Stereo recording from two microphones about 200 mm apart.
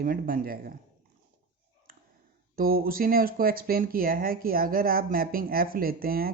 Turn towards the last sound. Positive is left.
turn(degrees=-45)  # may be behind; listen again after turning